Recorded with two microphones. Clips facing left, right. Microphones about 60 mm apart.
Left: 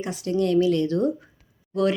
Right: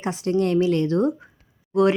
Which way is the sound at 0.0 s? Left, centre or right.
Right.